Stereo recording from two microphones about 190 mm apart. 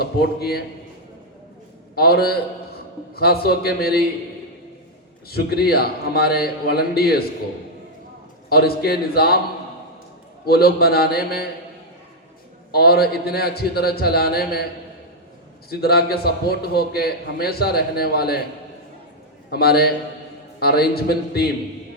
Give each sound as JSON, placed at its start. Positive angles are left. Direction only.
{"t": 0.0, "sound": "a man's voice", "side_deg": 55}
{"t": 2.0, "sound": "a man's voice", "side_deg": 55}
{"t": 5.3, "sound": "a man's voice", "side_deg": 55}
{"t": 8.4, "sound": "a man's voice", "side_deg": 55}
{"t": 10.4, "sound": "a man's voice", "side_deg": 55}
{"t": 12.7, "sound": "a man's voice", "side_deg": 55}
{"t": 15.7, "sound": "a man's voice", "side_deg": 55}
{"t": 19.5, "sound": "a man's voice", "side_deg": 55}